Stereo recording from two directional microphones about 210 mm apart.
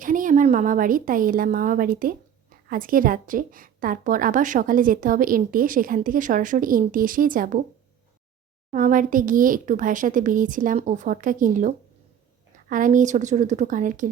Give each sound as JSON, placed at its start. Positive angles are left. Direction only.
{"t": 0.0, "sound": "a woman's voice", "side_deg": -40}
{"t": 8.7, "sound": "a woman's voice", "side_deg": -40}